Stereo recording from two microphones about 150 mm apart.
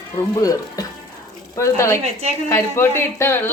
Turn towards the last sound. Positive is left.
turn(degrees=15)  # may be behind; listen again after turning